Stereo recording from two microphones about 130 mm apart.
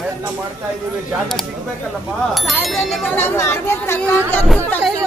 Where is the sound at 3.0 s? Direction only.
15° left (ahead or behind).